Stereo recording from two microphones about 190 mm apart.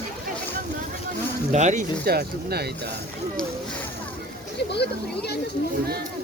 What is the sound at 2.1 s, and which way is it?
Speech, 55° right (ahead or behind).